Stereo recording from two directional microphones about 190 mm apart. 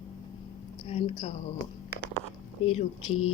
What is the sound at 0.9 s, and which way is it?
Speech, 35° left (ahead or behind).